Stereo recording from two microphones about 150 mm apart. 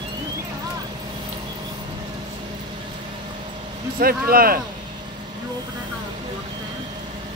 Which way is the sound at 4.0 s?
75° right (ahead or behind).